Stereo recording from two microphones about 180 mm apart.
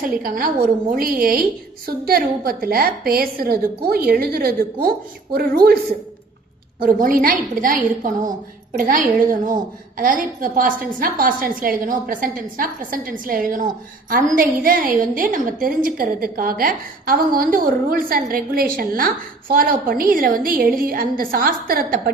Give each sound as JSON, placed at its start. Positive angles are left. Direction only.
{"t": 0.2, "sound": "a woman's voice", "side_deg": -50}
{"t": 6.8, "sound": "a woman's voice", "side_deg": -50}